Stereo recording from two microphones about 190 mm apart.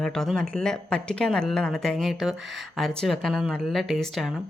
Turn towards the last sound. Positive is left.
turn(degrees=0)  # may be behind; listen again after turning